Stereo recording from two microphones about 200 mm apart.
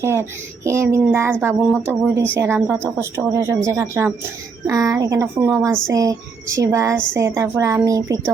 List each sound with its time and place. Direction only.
0.0 s a woman's voice: 10° right (ahead or behind)